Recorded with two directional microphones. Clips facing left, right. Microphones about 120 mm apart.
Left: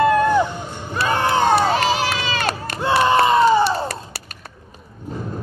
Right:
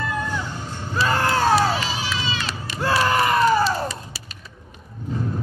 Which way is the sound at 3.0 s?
25° left (ahead or behind).